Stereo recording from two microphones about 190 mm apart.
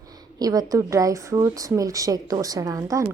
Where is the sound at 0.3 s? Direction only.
20° right (ahead or behind).